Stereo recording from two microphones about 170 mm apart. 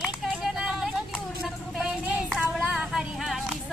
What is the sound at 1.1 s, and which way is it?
Child singing, centre (ahead or behind).